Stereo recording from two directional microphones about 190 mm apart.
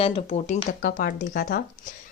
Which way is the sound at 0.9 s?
45° left (ahead or behind).